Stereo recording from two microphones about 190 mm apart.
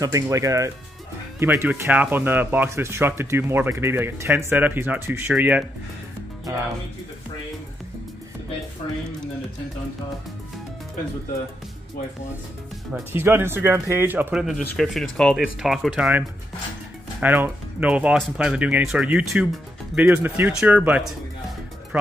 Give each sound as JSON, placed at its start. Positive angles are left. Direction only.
{"t": 0.0, "sound": "speech", "side_deg": -15}
{"t": 8.8, "sound": "speech", "side_deg": 25}
{"t": 13.1, "sound": "speech", "side_deg": -10}